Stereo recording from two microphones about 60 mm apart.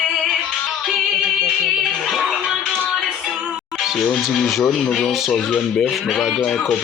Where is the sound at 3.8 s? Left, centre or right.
Centre.